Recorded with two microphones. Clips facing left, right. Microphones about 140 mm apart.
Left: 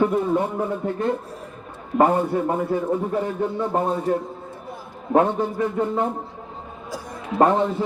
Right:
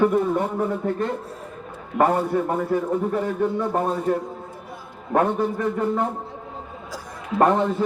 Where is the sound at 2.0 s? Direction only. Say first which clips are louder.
Left 1 dB; 15° left (ahead or behind).